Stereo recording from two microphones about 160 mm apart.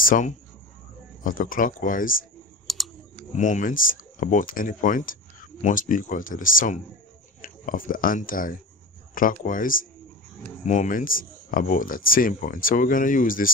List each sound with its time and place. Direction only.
0.0 s speech: 55° left (ahead or behind)
2.6 s typing: centre (ahead or behind)
3.3 s speech: 50° left (ahead or behind)